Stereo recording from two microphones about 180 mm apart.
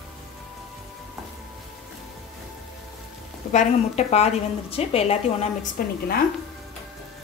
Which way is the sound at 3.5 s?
40° left (ahead or behind).